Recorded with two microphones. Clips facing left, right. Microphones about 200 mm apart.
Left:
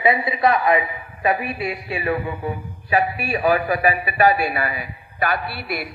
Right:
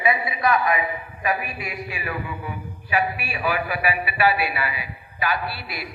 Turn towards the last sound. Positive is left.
turn(degrees=55)  # may be behind; listen again after turning